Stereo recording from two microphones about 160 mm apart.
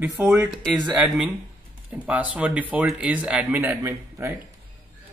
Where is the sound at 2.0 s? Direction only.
10° right (ahead or behind).